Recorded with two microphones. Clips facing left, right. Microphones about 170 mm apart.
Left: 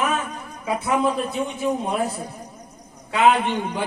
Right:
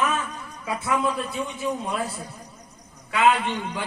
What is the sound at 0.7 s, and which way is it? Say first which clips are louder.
A man's voice: left 4 dB; 20° left (ahead or behind).